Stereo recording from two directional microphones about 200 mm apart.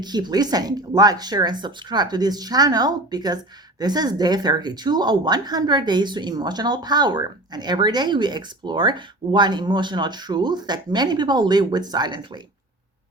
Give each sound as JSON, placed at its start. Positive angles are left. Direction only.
{"t": 0.0, "sound": "speech", "side_deg": -20}